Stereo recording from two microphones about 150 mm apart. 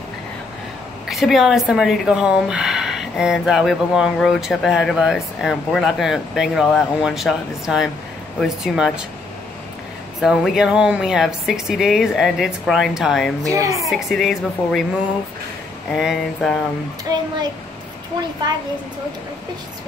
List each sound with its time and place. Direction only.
1.0 s a woman's voice: centre (ahead or behind)
10.2 s speech: centre (ahead or behind)
13.4 s a woman's voice: 20° right (ahead or behind)
13.8 s speech: centre (ahead or behind)
15.9 s speech: 5° right (ahead or behind)